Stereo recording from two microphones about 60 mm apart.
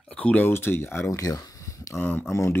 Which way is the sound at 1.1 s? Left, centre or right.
Left.